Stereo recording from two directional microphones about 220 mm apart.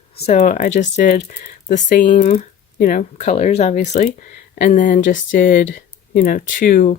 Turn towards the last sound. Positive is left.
turn(degrees=40)  # may be behind; listen again after turning